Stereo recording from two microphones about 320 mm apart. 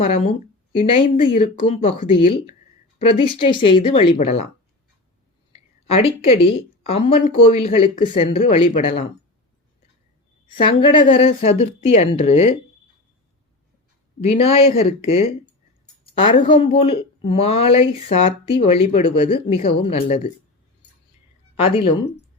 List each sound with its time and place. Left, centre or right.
0.0 s speech: centre
5.9 s speech: centre
10.5 s speech: centre
14.2 s speech: centre
21.5 s speech: centre